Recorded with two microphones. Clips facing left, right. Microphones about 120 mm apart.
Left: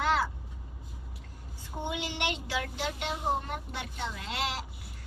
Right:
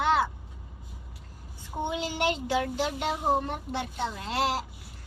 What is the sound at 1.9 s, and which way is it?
A child's voice, 35° right (ahead or behind).